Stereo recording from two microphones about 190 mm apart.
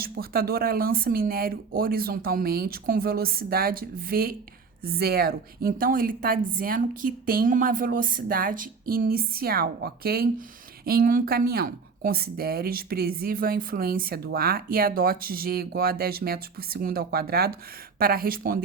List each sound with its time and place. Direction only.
0.0 s speech: 55° right (ahead or behind)